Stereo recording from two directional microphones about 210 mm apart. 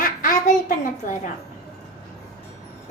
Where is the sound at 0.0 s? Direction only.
40° left (ahead or behind).